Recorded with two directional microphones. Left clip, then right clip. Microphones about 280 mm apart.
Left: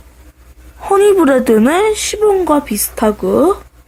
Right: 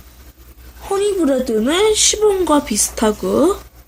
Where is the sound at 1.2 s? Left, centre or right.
Left.